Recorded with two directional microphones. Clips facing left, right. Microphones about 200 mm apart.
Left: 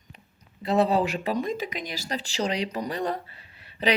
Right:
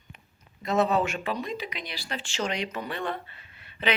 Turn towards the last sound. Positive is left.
turn(degrees=35)  # may be behind; listen again after turning